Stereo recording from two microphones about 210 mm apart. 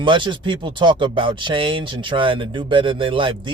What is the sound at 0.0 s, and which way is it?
Speech, 25° right (ahead or behind).